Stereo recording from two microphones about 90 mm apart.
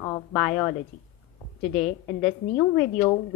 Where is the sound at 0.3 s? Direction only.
10° left (ahead or behind).